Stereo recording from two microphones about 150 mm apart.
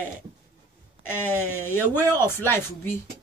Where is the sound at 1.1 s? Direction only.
15° left (ahead or behind).